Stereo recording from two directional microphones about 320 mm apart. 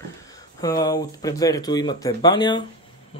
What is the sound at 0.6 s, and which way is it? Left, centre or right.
A man's voice, centre.